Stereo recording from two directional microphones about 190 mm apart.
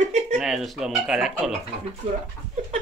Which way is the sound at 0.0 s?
40° right (ahead or behind).